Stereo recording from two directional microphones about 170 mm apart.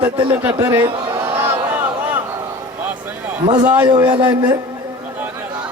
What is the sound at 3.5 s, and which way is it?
Music, 25° right (ahead or behind).